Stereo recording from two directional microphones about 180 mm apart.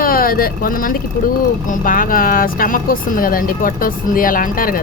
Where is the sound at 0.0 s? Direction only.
55° left (ahead or behind).